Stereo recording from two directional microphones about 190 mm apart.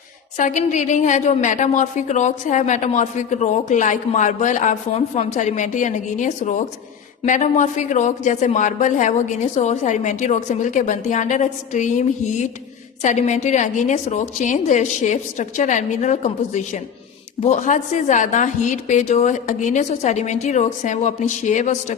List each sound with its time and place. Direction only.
0.3 s a woman's voice: 40° left (ahead or behind)